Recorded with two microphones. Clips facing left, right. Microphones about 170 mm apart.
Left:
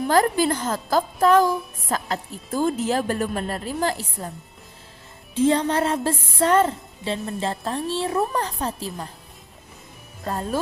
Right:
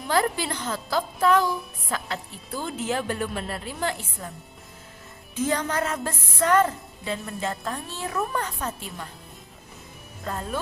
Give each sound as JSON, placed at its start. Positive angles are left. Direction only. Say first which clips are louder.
{"t": 0.1, "sound": "a woman's voice", "louder": "left 4 dB", "side_deg": 45}
{"t": 5.3, "sound": "a woman's voice", "louder": "left 6 dB", "side_deg": 30}
{"t": 10.2, "sound": "a woman's voice", "louder": "left 4 dB", "side_deg": 35}